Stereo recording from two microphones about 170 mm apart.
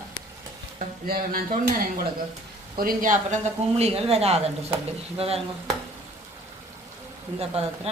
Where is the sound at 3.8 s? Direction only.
35° right (ahead or behind).